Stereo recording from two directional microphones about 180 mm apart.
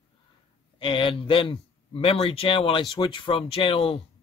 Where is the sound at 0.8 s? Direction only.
30° left (ahead or behind).